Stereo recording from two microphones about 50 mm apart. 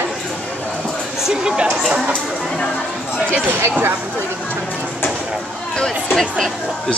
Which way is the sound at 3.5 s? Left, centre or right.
Right.